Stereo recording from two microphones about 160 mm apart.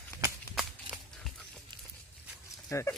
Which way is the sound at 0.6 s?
Centre (ahead or behind).